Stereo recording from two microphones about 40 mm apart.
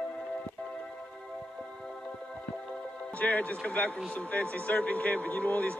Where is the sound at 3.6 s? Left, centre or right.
Left.